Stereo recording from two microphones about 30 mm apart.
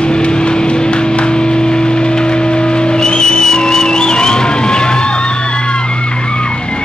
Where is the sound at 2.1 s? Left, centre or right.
Left.